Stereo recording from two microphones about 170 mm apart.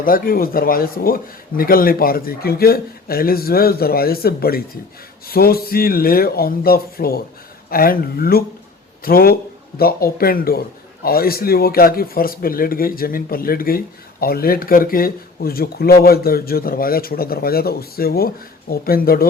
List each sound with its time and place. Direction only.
0.0 s speech: 55° left (ahead or behind)